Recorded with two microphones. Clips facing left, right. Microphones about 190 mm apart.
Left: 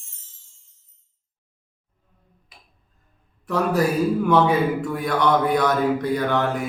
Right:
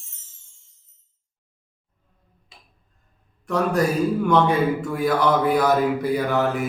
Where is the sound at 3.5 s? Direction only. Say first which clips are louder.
Even; centre (ahead or behind).